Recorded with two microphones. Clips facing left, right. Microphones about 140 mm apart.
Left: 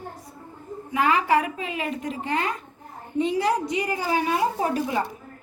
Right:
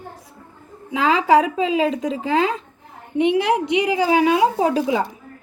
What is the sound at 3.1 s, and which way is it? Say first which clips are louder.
A woman's voice: right 5 dB; 70° right (ahead or behind).